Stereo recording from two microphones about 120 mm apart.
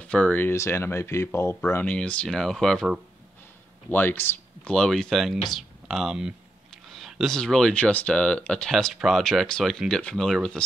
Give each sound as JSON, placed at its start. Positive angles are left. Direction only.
{"t": 0.0, "sound": "speech", "side_deg": 10}
{"t": 3.9, "sound": "speech", "side_deg": 15}
{"t": 4.6, "sound": "speech", "side_deg": 5}